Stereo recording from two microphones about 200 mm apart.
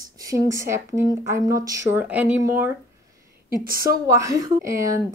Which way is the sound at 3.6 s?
45° right (ahead or behind).